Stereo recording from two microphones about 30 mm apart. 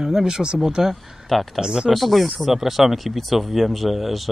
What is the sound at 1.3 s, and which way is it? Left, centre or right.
Speech, centre.